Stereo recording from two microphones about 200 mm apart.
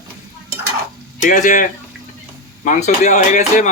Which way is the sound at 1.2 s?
40° left (ahead or behind).